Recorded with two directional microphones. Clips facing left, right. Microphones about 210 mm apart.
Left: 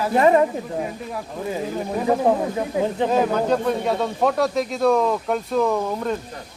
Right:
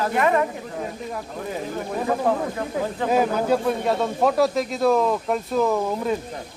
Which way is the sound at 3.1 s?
10° right (ahead or behind).